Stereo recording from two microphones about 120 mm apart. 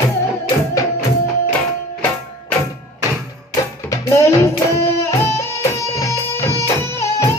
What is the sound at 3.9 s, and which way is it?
Music, 25° left (ahead or behind).